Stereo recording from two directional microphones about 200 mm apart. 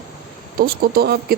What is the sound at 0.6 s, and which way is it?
Speech, 50° right (ahead or behind).